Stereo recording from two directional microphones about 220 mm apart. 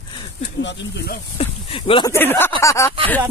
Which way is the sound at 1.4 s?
25° left (ahead or behind).